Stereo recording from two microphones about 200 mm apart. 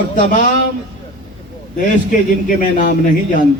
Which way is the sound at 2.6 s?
40° left (ahead or behind).